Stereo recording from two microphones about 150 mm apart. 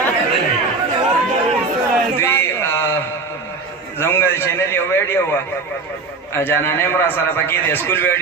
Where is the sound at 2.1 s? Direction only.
15° left (ahead or behind).